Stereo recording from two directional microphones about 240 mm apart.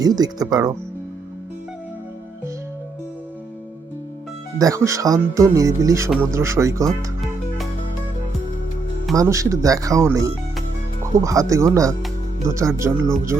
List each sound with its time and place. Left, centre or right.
0.0 s speech: centre
4.5 s speech: centre
9.1 s speech: centre